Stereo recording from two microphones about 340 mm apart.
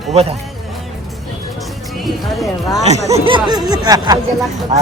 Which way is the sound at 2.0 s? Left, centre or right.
Centre.